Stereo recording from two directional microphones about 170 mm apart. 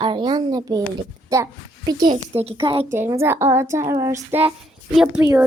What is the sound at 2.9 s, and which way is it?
Speech, 15° right (ahead or behind).